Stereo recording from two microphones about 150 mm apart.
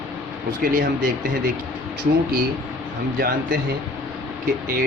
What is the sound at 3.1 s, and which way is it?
Speech, 90° right.